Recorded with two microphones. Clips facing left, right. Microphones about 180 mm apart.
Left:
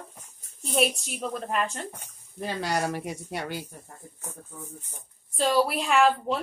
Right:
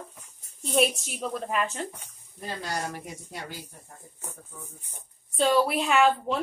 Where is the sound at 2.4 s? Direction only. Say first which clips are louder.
Left 5 dB; 85° left.